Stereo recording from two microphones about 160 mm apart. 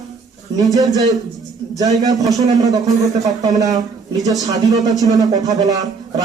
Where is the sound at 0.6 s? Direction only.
20° right (ahead or behind).